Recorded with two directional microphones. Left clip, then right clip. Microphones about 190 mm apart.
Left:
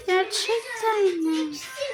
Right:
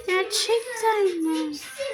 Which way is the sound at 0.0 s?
5° right (ahead or behind).